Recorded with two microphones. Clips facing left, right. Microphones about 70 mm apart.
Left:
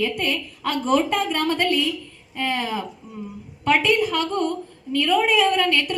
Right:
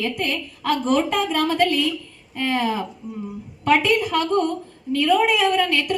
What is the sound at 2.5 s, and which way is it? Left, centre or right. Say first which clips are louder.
Speech: right 6 dB; right.